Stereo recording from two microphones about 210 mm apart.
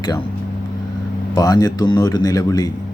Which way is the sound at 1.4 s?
15° left (ahead or behind).